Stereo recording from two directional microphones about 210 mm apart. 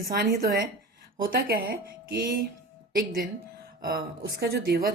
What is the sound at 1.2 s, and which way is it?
Speech, 45° right (ahead or behind).